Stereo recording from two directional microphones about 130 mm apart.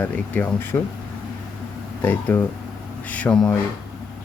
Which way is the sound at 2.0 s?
15° left (ahead or behind).